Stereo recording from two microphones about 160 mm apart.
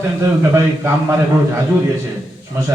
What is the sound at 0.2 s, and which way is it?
Speech, 20° right (ahead or behind).